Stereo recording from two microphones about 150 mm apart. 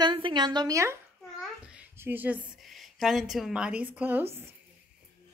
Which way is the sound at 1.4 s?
5° right (ahead or behind).